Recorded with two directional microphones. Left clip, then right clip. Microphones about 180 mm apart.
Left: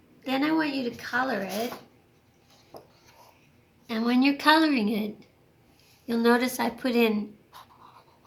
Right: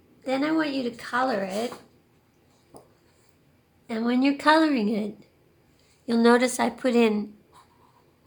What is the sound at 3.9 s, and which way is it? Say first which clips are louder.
A woman's voice: even; 35° right (ahead or behind).